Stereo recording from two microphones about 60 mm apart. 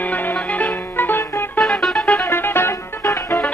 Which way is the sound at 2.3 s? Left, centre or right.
Left.